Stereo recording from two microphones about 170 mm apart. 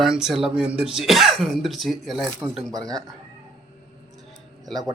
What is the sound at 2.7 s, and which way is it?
Speech, 20° right (ahead or behind).